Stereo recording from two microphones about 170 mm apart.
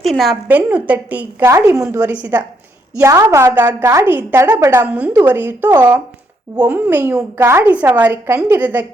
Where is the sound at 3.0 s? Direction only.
20° right (ahead or behind).